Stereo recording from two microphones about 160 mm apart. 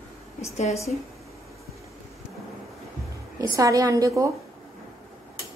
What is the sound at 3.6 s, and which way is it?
Speech, 20° right (ahead or behind).